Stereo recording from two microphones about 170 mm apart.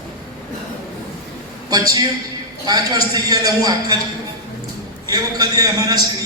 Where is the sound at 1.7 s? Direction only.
20° right (ahead or behind).